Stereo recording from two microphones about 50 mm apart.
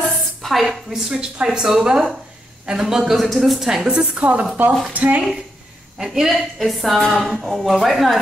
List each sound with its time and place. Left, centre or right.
0.1 s a sound: centre
1.1 s a woman's voice: centre
4.2 s a woman's voice: right
5.9 s a woman's voice: centre